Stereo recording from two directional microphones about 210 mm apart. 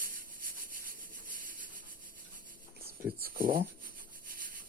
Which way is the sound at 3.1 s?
45° right (ahead or behind).